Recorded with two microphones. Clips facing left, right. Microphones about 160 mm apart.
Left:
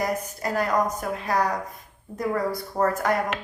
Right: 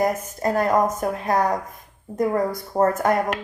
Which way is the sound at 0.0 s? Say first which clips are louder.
Right 5 dB; 45° right (ahead or behind).